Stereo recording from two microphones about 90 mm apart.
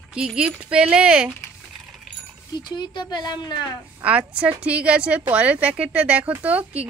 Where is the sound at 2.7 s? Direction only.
55° left (ahead or behind).